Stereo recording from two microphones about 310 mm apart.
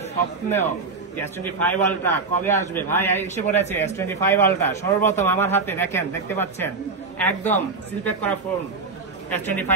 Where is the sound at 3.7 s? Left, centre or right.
Centre.